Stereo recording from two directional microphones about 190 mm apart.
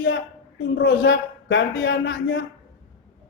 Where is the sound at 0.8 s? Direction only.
65° left (ahead or behind).